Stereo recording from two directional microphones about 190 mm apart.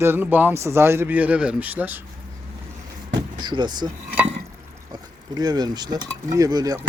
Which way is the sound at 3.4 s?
25° right (ahead or behind).